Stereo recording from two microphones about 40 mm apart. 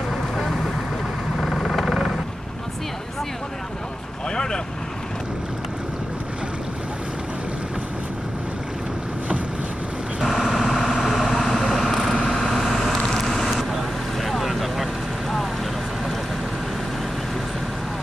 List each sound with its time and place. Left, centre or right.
1.4 s vehicle: centre
10.2 s vehicle: centre